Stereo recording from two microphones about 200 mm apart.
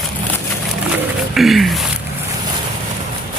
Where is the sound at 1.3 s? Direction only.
Centre (ahead or behind).